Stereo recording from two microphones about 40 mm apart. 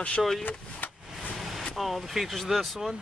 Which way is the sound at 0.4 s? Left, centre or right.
Left.